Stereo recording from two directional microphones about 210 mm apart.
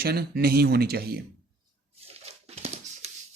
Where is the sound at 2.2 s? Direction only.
30° right (ahead or behind).